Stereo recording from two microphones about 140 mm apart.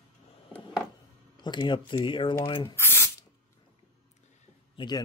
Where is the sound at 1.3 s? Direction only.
35° left (ahead or behind).